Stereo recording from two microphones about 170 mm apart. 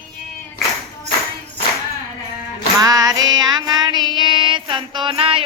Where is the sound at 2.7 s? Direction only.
20° right (ahead or behind).